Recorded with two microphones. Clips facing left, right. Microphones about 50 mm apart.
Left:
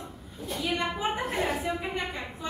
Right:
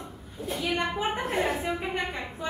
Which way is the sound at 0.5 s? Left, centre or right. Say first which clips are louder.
Right 1 dB; centre.